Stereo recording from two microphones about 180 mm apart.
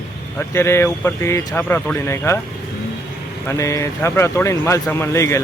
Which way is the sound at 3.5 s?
15° left (ahead or behind).